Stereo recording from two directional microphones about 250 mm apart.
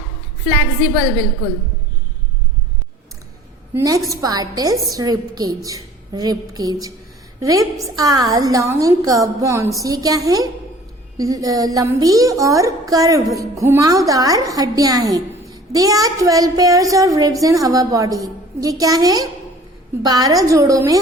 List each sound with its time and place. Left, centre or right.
3.8 s a woman's voice: centre